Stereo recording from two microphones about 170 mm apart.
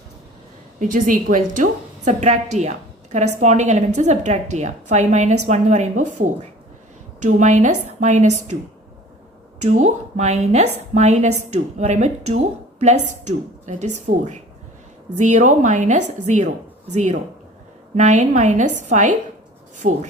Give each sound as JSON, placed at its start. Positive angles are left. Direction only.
{"t": 0.8, "sound": "a woman's voice", "side_deg": -50}
{"t": 9.6, "sound": "a woman's voice", "side_deg": -45}